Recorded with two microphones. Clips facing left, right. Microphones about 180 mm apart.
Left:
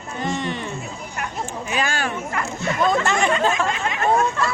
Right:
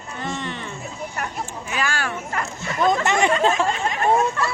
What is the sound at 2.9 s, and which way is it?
Speech, 20° right (ahead or behind).